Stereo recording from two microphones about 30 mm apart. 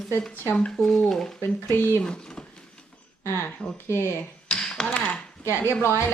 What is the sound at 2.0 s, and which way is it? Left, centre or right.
Speech, left.